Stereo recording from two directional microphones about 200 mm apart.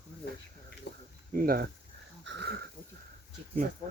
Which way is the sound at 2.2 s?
60° right (ahead or behind).